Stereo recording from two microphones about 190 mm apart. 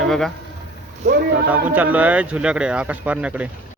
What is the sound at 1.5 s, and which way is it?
Speech, 10° right (ahead or behind).